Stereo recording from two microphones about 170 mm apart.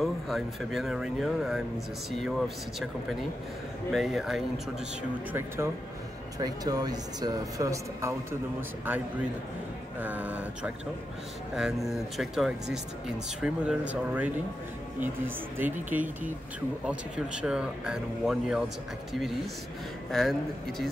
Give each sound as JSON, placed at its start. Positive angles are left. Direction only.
{"t": 0.0, "sound": "speech", "side_deg": 0}
{"t": 6.4, "sound": "speech", "side_deg": -20}
{"t": 20.1, "sound": "speech", "side_deg": 0}